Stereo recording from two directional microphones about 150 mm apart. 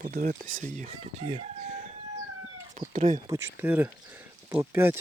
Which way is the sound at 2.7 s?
55° right (ahead or behind).